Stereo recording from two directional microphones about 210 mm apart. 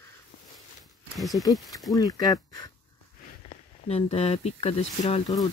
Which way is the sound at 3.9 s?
30° left (ahead or behind).